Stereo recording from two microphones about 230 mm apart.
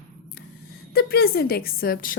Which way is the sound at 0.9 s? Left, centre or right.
Left.